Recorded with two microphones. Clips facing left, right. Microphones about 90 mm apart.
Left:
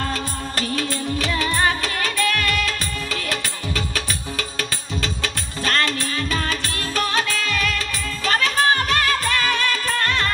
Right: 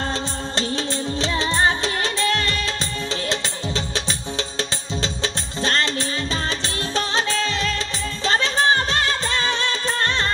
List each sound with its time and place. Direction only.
0.0 s music of bollywood: 25° right (ahead or behind)